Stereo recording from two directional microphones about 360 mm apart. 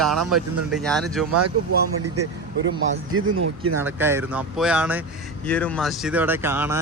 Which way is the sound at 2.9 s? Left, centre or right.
Right.